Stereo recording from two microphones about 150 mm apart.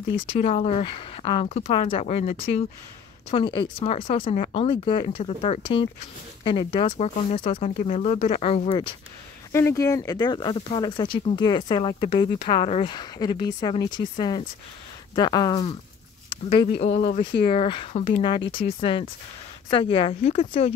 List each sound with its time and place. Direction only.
0.1 s speech: 40° left (ahead or behind)
4.6 s speech: 35° left (ahead or behind)
9.5 s speech: 20° left (ahead or behind)
16.8 s speech: 45° left (ahead or behind)